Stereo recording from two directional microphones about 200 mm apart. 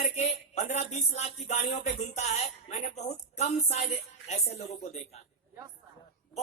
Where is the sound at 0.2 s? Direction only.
35° left (ahead or behind).